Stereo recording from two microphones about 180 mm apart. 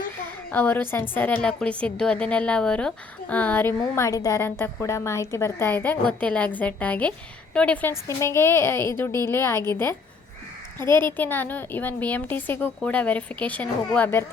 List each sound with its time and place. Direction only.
0.5 s a woman's voice: 10° left (ahead or behind)